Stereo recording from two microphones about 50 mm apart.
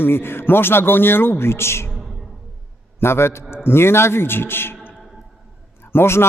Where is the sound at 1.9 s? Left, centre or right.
Centre.